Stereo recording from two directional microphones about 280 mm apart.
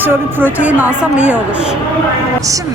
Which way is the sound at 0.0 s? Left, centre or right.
Centre.